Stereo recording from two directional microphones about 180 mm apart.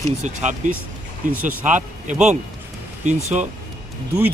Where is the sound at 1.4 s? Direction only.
45° right (ahead or behind).